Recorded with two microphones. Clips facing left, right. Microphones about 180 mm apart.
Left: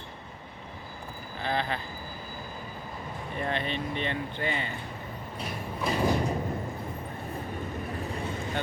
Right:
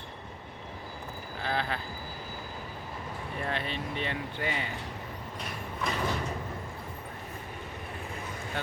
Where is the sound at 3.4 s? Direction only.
Centre (ahead or behind).